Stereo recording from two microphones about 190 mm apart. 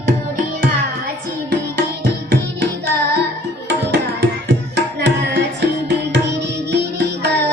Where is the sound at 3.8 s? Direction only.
65° right (ahead or behind).